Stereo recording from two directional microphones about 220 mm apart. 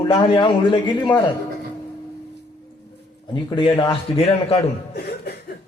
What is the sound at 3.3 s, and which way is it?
A man's voice, 20° left (ahead or behind).